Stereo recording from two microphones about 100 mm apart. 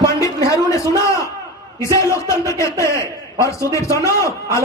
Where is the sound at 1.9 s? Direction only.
30° left (ahead or behind).